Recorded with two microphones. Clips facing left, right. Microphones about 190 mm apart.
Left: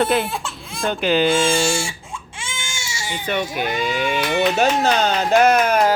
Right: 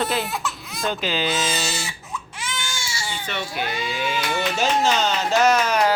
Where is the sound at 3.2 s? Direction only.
50° left (ahead or behind).